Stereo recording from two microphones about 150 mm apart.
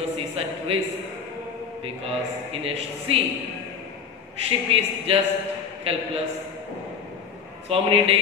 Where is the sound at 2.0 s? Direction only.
40° right (ahead or behind).